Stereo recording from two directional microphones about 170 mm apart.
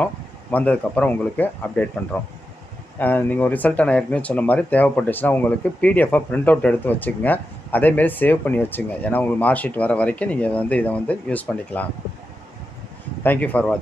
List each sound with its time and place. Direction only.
0.0 s speech: 10° left (ahead or behind)
13.2 s speech: 10° left (ahead or behind)